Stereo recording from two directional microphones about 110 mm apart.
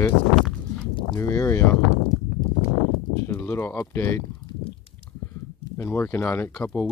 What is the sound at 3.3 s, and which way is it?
Speech, 25° left (ahead or behind).